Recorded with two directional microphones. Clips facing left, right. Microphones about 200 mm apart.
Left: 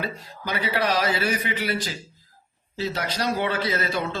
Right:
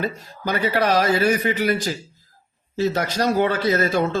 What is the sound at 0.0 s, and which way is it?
A man's voice, 45° right (ahead or behind).